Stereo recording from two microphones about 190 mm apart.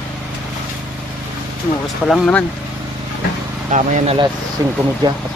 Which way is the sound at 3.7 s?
40° right (ahead or behind).